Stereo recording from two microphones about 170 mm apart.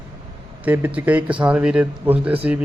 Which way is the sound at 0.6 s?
10° right (ahead or behind).